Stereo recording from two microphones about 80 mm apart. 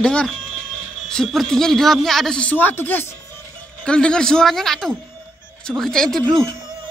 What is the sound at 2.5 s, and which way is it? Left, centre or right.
Speech, left.